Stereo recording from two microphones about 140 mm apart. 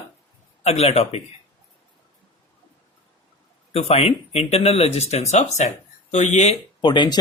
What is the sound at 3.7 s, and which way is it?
Speech, 45° left (ahead or behind).